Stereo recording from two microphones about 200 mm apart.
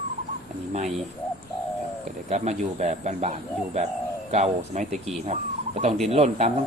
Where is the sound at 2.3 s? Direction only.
35° right (ahead or behind).